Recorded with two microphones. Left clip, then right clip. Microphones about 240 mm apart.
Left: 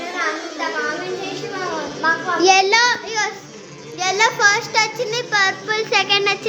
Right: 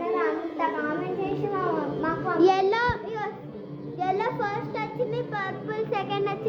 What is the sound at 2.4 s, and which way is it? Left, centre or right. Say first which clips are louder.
Speech: left 8 dB; centre.